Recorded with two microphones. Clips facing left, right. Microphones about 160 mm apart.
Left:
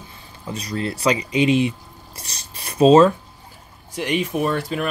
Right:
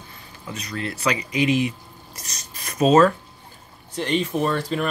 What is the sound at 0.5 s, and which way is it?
Speech, 30° left (ahead or behind).